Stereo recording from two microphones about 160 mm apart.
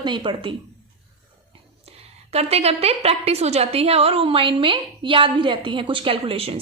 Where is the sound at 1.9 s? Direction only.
40° right (ahead or behind).